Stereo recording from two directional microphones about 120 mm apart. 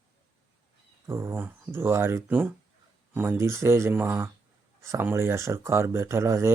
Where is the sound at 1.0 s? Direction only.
20° right (ahead or behind).